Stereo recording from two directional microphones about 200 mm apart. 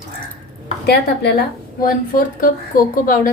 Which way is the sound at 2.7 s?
45° left (ahead or behind).